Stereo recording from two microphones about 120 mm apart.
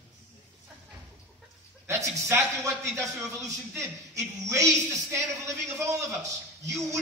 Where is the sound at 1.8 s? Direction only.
20° right (ahead or behind).